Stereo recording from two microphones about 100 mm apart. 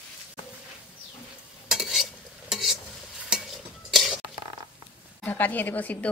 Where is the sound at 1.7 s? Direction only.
5° right (ahead or behind).